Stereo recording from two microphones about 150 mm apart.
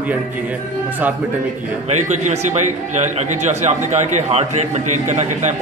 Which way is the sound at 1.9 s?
50° right (ahead or behind).